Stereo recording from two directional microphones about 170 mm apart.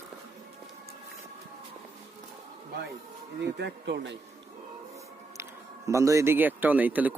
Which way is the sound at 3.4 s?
85° right.